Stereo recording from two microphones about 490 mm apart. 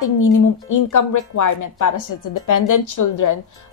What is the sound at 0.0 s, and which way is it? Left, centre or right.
Speech, left.